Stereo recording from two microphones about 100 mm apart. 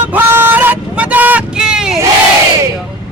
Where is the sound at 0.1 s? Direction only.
20° right (ahead or behind).